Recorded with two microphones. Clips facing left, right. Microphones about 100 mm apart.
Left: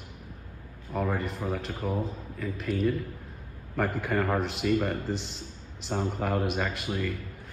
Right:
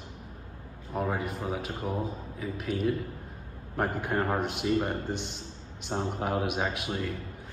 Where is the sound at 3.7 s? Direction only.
90° left.